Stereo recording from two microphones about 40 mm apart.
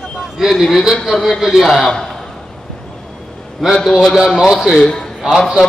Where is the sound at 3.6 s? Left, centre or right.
Centre.